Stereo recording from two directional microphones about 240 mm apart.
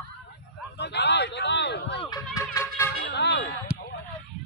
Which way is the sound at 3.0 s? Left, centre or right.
Left.